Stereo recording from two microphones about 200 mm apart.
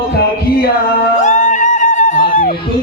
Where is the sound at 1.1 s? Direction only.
40° left (ahead or behind).